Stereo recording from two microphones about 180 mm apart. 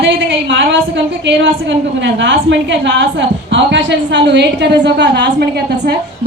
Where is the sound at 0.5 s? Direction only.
90° right.